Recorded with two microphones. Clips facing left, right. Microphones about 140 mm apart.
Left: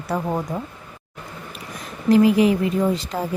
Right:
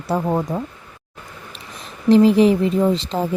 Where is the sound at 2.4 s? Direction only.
30° right (ahead or behind).